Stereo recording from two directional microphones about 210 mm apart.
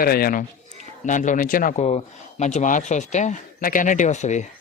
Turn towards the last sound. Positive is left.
turn(degrees=35)  # may be behind; listen again after turning